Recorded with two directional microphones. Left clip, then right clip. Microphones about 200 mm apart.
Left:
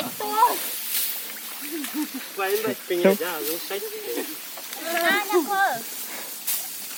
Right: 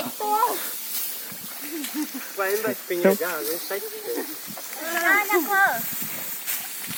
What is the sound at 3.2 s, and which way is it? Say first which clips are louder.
Speech: right 1 dB; 40° left (ahead or behind).